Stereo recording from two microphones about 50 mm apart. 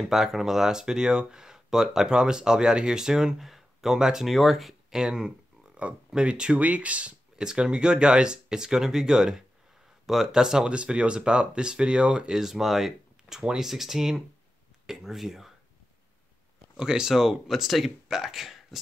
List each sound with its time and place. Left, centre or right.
0.0 s speech: centre
4.3 s speech: centre
5.8 s speech: right
7.3 s speech: centre
16.7 s speech: centre